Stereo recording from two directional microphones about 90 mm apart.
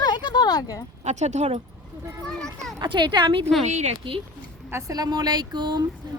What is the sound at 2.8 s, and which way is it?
Speech, 55° right (ahead or behind).